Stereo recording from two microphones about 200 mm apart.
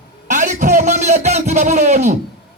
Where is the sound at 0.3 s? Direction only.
40° right (ahead or behind).